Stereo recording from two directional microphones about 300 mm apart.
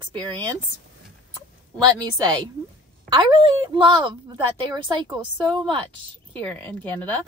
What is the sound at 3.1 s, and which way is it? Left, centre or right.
Speech, centre.